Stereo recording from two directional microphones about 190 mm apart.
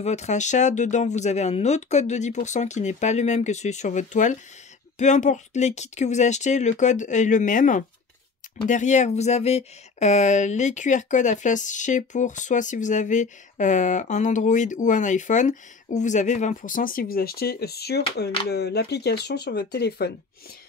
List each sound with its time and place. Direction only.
0.0 s speech: 35° left (ahead or behind); by 20.1 s 60° left (ahead or behind)